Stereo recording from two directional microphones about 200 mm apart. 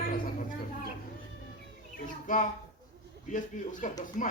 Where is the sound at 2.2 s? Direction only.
40° left (ahead or behind).